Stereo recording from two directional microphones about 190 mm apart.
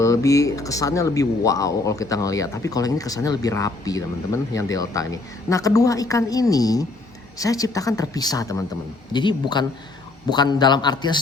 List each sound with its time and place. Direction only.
0.0 s a man's voice: 15° left (ahead or behind)